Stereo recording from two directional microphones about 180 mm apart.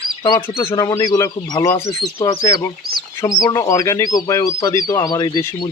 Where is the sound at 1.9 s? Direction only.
30° left (ahead or behind).